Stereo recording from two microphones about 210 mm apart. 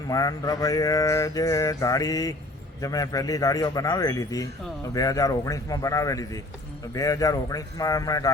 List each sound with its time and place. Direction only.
0.1 s mantra: 15° left (ahead or behind)